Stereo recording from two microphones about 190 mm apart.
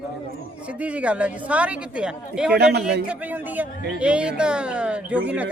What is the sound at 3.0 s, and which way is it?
A woman's voice, 10° right (ahead or behind).